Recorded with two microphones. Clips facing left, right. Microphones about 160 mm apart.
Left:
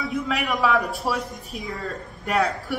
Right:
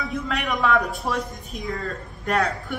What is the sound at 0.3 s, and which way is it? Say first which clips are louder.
Speech: even; 5° left (ahead or behind).